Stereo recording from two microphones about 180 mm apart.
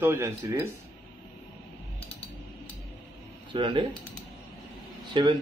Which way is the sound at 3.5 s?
25° right (ahead or behind).